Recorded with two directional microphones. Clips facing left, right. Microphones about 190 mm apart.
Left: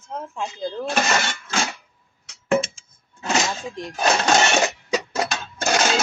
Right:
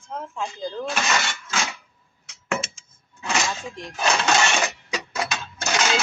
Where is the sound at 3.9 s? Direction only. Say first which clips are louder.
Left 3 dB; 40° left (ahead or behind).